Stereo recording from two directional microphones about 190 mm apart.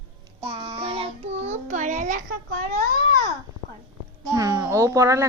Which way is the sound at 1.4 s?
40° right (ahead or behind).